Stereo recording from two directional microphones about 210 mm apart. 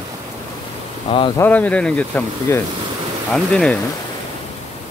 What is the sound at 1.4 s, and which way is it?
Speech, 5° left (ahead or behind).